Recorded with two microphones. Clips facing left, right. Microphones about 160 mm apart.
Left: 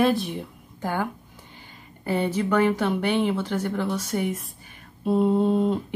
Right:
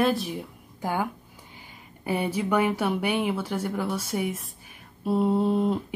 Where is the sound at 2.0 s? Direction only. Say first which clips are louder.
Left 2 dB; 10° right (ahead or behind).